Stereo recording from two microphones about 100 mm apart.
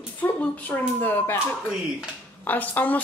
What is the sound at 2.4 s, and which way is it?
Speech, 15° left (ahead or behind).